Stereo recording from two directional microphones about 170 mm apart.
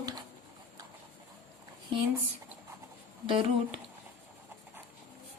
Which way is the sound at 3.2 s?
30° right (ahead or behind).